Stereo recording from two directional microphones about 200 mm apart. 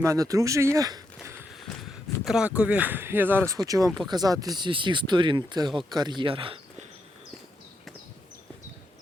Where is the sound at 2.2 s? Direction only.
5° right (ahead or behind); by 6.6 s 25° right (ahead or behind).